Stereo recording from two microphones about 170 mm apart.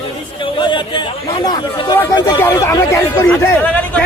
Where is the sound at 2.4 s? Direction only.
15° left (ahead or behind).